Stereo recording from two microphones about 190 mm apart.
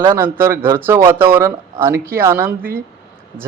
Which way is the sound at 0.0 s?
10° right (ahead or behind).